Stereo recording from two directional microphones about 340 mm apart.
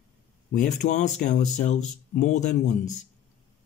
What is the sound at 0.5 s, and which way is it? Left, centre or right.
Speech, left.